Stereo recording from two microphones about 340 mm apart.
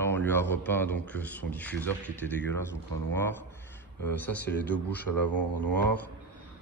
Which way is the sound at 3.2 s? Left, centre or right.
Centre.